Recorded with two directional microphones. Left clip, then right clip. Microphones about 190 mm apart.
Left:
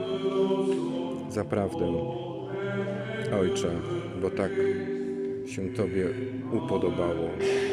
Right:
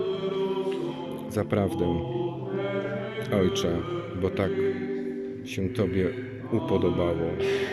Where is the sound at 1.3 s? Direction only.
Centre (ahead or behind).